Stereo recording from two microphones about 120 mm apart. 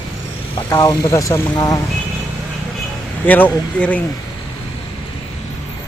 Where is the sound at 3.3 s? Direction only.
15° left (ahead or behind).